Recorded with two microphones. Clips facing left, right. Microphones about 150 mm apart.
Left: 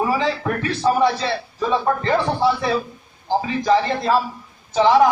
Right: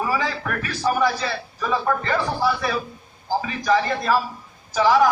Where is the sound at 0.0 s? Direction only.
25° left (ahead or behind).